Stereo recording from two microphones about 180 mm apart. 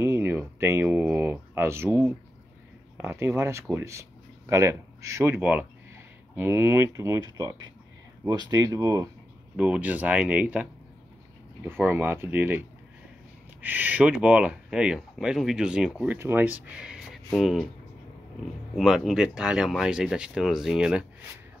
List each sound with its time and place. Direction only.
0.0 s speech: 15° right (ahead or behind)
18.8 s speech: centre (ahead or behind)